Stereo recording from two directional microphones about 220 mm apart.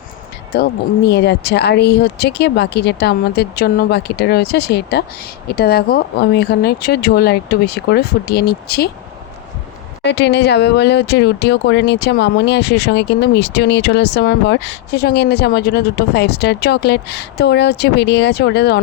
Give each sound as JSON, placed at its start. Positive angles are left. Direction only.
{"t": 0.5, "sound": "speech", "side_deg": 45}
{"t": 10.0, "sound": "speech", "side_deg": 50}